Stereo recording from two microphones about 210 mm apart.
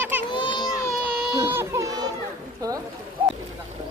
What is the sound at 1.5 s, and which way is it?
Music, 15° right (ahead or behind).